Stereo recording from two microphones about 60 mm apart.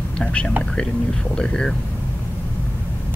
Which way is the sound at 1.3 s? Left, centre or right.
Centre.